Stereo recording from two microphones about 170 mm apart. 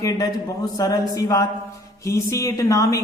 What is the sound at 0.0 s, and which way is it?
Speech, 20° left (ahead or behind).